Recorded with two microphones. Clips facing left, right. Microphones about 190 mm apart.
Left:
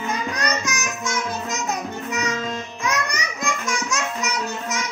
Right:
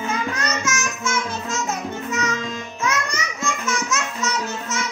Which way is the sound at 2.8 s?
15° left (ahead or behind).